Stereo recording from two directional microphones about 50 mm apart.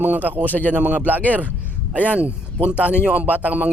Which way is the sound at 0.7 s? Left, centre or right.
Right.